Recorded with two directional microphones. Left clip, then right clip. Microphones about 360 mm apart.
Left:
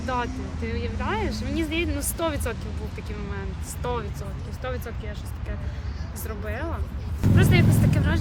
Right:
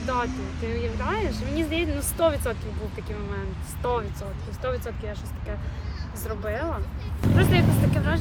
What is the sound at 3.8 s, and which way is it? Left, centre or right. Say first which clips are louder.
Speech: right 3 dB; centre.